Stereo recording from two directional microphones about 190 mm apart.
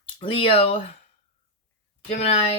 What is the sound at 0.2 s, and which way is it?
Speech, 30° left (ahead or behind).